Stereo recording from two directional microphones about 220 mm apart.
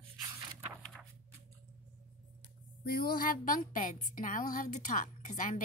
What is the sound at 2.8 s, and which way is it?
A woman's voice, 45° left (ahead or behind).